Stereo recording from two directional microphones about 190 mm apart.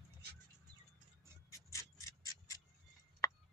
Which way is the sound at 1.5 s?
15° left (ahead or behind).